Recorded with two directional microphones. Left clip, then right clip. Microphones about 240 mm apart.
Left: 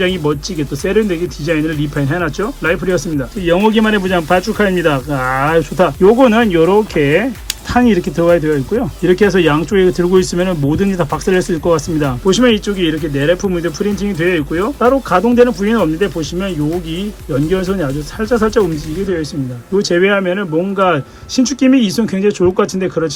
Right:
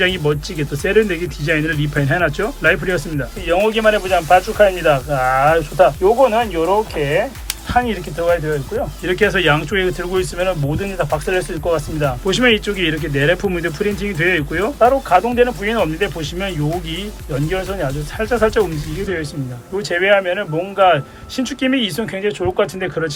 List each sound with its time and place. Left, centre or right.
0.0 s speech: centre
3.4 s speech: left
6.9 s speech: left
7.7 s speech: left
19.8 s speech: left